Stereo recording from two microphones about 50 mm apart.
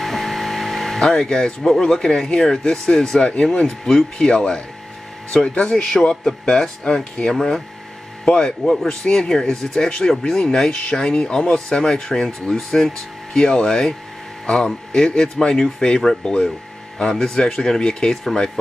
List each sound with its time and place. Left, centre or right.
0.0 s a sound: centre
1.0 s speech: centre
5.7 s speech: centre